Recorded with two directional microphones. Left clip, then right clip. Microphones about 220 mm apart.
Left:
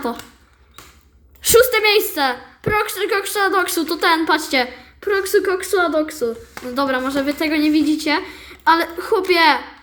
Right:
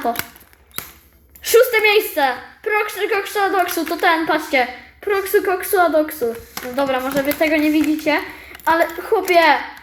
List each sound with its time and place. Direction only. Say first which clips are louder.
1.5 s a woman's voice: even; 60° left (ahead or behind)
5.4 s a woman's voice: right 2 dB; 30° left (ahead or behind)
6.7 s a woman's voice: right 1 dB; 55° left (ahead or behind)